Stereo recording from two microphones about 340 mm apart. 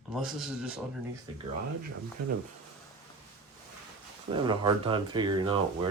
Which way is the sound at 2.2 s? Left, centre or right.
Right.